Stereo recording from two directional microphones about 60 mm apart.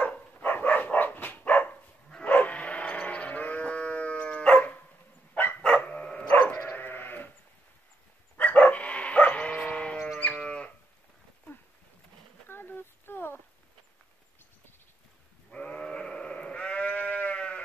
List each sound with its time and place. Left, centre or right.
0.0 s dog: left
6.5 s bow-wow: left
8.4 s bow-wow: left
9.9 s dog: centre
10.2 s moo: left
12.4 s a sound: left
15.5 s sheep: centre